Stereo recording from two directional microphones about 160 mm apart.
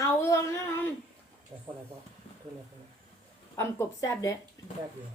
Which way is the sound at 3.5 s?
20° left (ahead or behind).